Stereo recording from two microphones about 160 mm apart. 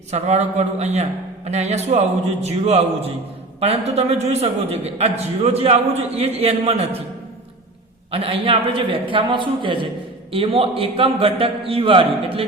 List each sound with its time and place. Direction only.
0.1 s a man's voice: 45° right (ahead or behind)
8.1 s a man's voice: 35° right (ahead or behind)